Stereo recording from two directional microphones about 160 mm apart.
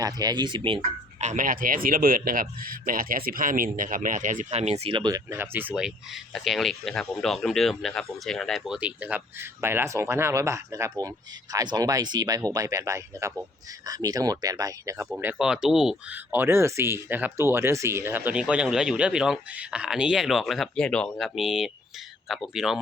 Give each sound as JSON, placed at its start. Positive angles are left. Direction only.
{"t": 0.0, "sound": "speech", "side_deg": -25}
{"t": 5.3, "sound": "speech", "side_deg": -10}
{"t": 15.1, "sound": "speech", "side_deg": -10}